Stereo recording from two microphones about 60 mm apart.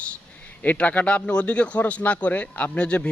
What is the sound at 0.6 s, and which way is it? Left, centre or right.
Speech, left.